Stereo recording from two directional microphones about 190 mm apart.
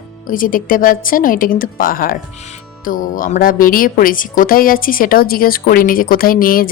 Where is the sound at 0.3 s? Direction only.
45° left (ahead or behind).